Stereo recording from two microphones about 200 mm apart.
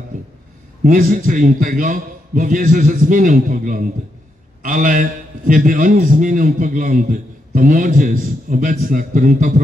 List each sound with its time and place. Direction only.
0.8 s a man's voice: 45° right (ahead or behind)